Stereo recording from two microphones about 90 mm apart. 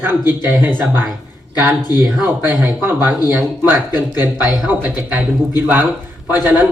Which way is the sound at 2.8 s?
20° right (ahead or behind).